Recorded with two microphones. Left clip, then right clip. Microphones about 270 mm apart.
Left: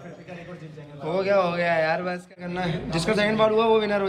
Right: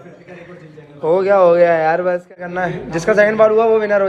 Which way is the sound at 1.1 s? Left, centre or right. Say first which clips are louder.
Right 11 dB; centre.